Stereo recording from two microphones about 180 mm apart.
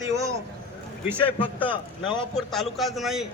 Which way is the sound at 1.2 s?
30° left (ahead or behind).